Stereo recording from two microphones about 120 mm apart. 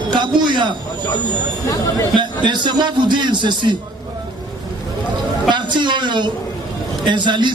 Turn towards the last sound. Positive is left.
turn(degrees=-40)  # may be behind; listen again after turning